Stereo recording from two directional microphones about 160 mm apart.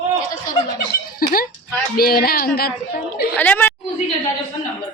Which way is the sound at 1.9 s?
70° left (ahead or behind).